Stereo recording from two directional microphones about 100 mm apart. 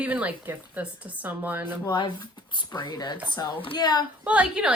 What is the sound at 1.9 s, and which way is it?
Speech, 50° left (ahead or behind).